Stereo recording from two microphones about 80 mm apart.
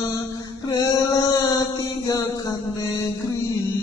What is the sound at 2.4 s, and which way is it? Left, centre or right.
Music, left.